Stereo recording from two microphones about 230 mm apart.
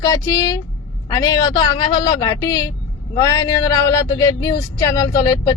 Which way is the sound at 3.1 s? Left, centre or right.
Centre.